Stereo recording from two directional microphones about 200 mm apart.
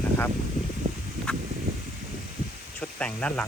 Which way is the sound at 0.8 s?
40° right (ahead or behind).